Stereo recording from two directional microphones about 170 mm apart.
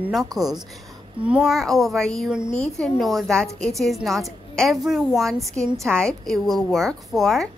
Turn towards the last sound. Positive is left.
turn(degrees=0)  # may be behind; listen again after turning